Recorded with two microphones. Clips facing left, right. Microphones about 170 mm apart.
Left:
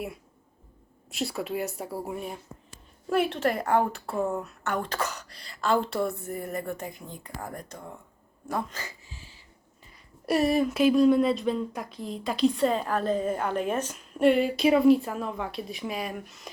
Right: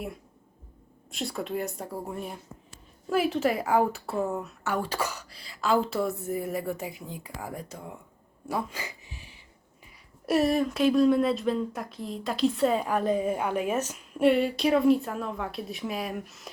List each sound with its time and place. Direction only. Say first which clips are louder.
1.1 s speech: left 1 dB; 5° left (ahead or behind)
8.4 s a sound: even; 10° right (ahead or behind)
10.2 s speech: even; centre (ahead or behind)